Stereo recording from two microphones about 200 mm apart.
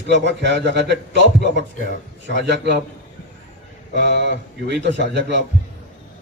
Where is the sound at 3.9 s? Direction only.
60° right (ahead or behind).